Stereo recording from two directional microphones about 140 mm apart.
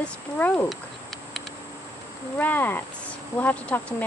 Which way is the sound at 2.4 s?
15° left (ahead or behind).